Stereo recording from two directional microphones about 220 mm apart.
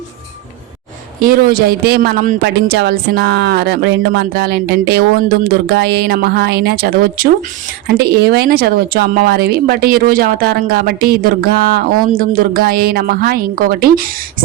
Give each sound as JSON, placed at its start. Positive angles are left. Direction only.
{"t": 1.2, "sound": "speech", "side_deg": -40}